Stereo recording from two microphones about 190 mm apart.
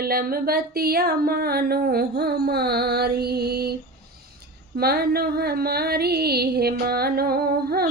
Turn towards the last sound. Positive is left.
turn(degrees=-55)  # may be behind; listen again after turning